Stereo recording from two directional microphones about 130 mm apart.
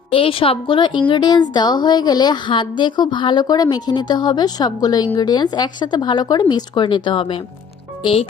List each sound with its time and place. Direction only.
0.1 s a woman's voice: 45° left (ahead or behind)